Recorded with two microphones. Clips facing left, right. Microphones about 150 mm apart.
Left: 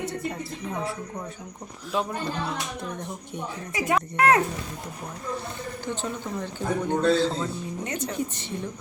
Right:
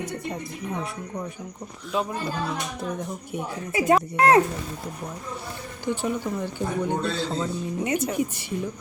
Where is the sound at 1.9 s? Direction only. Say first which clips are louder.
Right 1 dB; centre (ahead or behind).